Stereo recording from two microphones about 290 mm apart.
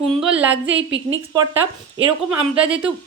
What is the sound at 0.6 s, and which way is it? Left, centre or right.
Speech, right.